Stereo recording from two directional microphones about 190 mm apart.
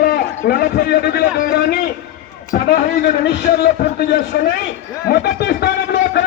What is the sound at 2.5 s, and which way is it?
Speech, 45° left (ahead or behind).